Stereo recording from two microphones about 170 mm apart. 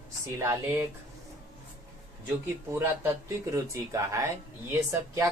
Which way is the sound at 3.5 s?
20° right (ahead or behind).